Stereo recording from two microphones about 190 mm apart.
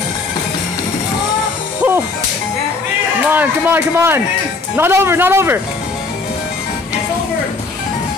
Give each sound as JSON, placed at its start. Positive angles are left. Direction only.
{"t": 3.3, "sound": "a man's voice", "side_deg": -10}